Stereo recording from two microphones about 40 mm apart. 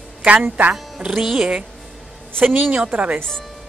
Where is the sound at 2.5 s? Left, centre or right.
Right.